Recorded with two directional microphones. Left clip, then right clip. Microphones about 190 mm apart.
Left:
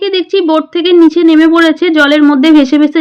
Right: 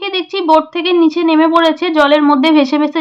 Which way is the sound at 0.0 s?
25° left (ahead or behind).